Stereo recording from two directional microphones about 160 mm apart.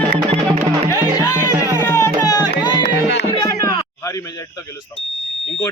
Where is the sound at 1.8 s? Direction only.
20° left (ahead or behind).